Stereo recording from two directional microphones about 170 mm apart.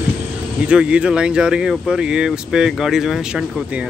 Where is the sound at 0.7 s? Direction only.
5° right (ahead or behind).